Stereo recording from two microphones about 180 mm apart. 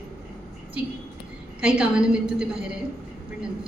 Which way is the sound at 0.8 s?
5° right (ahead or behind).